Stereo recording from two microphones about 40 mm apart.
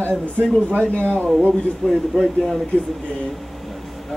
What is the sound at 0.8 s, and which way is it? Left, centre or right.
Speech, left.